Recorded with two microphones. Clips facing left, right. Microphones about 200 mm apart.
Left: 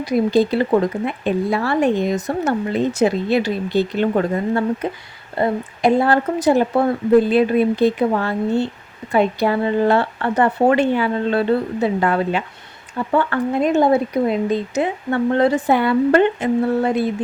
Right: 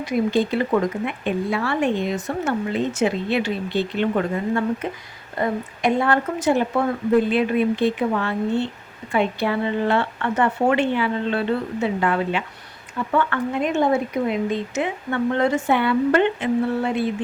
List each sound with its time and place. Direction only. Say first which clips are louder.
0.0 s speech: left 4 dB; 35° left (ahead or behind)